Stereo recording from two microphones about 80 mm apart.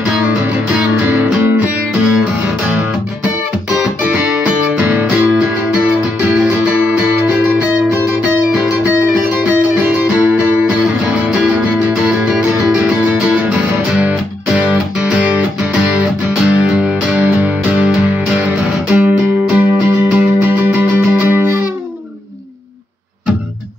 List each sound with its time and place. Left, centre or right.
1.0 s music: right
4.7 s music: right
6.3 s music: centre
8.2 s music: centre